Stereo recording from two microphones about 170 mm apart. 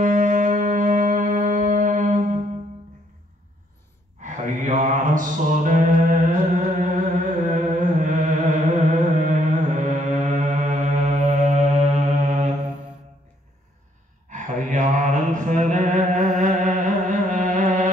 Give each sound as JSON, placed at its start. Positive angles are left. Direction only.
{"t": 0.0, "sound": "music", "side_deg": -50}
{"t": 4.2, "sound": "music", "side_deg": -45}
{"t": 8.7, "sound": "mantra", "side_deg": -45}
{"t": 14.3, "sound": "mantra", "side_deg": -45}